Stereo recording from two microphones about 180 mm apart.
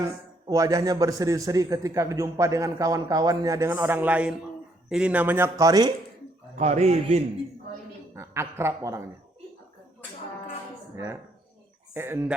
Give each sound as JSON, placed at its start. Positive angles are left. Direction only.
{"t": 0.0, "sound": "a man's voice", "side_deg": -20}
{"t": 6.6, "sound": "a man's voice", "side_deg": -35}
{"t": 8.1, "sound": "speech", "side_deg": -15}
{"t": 10.9, "sound": "a man's voice", "side_deg": -15}